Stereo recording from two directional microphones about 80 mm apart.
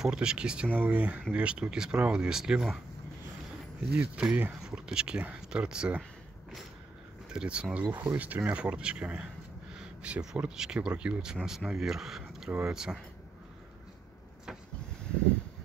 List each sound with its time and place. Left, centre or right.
0.0 s speech: centre
3.9 s speech: centre
7.2 s speech: centre